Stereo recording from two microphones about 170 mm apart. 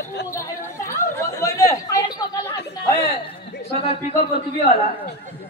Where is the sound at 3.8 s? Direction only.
35° left (ahead or behind).